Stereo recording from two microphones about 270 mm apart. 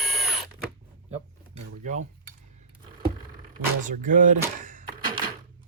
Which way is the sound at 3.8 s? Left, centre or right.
Right.